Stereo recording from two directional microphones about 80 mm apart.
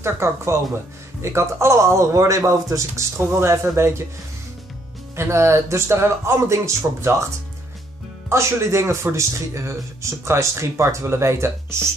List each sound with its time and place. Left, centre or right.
0.0 s speech: right
5.1 s speech: right
8.3 s speech: right